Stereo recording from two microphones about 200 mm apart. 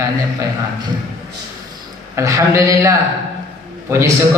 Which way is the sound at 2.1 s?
15° right (ahead or behind).